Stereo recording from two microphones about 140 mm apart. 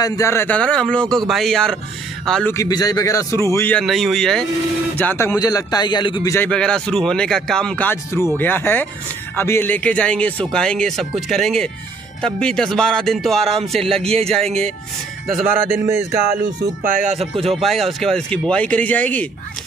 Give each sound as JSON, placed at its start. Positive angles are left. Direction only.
{"t": 0.0, "sound": "a man's voice", "side_deg": 20}
{"t": 2.5, "sound": "speech", "side_deg": 25}
{"t": 3.8, "sound": "a man's voice", "side_deg": 0}
{"t": 4.9, "sound": "speech", "side_deg": 15}
{"t": 6.5, "sound": "a man's voice", "side_deg": 5}
{"t": 15.7, "sound": "speech", "side_deg": -20}
{"t": 16.4, "sound": "speech", "side_deg": -70}
{"t": 17.3, "sound": "speech", "side_deg": -45}
{"t": 17.6, "sound": "speech", "side_deg": 0}